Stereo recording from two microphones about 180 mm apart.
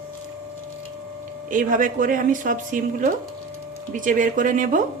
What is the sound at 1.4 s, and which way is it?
Speech, 50° right (ahead or behind).